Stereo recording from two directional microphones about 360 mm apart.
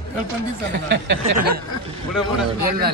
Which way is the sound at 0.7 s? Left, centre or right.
Right.